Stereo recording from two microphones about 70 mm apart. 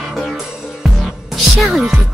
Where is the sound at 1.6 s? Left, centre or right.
Centre.